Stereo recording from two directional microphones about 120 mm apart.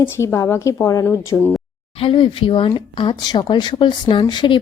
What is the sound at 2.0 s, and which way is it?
A woman's voice, 45° left (ahead or behind).